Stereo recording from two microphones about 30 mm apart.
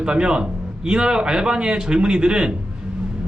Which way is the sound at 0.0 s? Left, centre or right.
Right.